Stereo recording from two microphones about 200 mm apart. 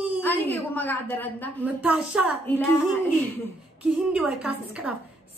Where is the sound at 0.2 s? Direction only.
10° left (ahead or behind).